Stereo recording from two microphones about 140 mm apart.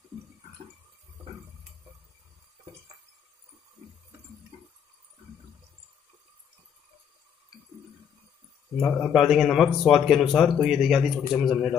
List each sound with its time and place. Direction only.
8.8 s a man's voice: 10° left (ahead or behind)
9.1 s speech: centre (ahead or behind)